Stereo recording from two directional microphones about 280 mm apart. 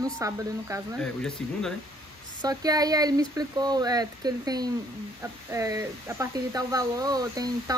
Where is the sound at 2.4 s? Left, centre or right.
Centre.